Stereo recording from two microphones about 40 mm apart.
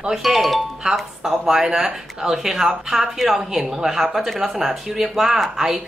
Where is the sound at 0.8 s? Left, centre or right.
Right.